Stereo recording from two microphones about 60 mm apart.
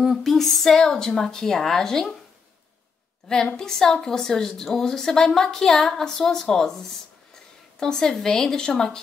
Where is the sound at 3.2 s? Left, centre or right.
Centre.